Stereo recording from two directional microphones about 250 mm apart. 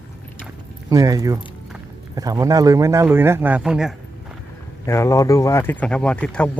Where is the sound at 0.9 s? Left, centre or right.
Centre.